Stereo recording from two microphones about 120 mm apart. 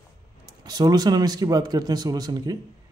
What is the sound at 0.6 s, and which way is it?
Speech, 35° right (ahead or behind).